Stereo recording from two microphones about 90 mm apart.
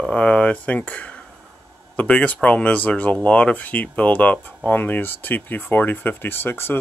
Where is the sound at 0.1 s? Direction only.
15° left (ahead or behind).